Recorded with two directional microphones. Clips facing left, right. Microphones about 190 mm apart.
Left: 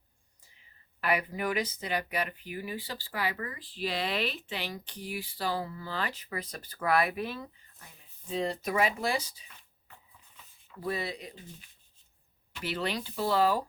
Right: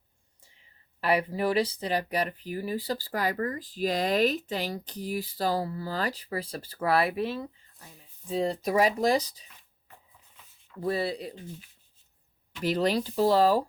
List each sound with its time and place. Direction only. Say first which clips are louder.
1.0 s speech: right 4 dB; 30° right (ahead or behind)
8.4 s speech: right 5 dB; 35° right (ahead or behind)
10.8 s speech: right 5 dB; 35° right (ahead or behind)
12.6 s speech: right 8 dB; 40° right (ahead or behind)